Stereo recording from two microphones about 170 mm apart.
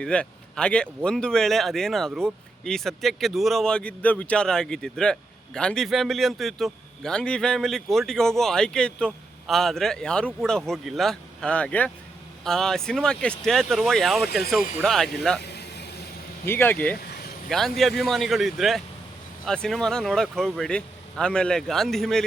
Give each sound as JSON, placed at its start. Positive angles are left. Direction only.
{"t": 0.0, "sound": "speech", "side_deg": 5}
{"t": 15.4, "sound": "vehicle", "side_deg": 75}
{"t": 16.5, "sound": "speech", "side_deg": 10}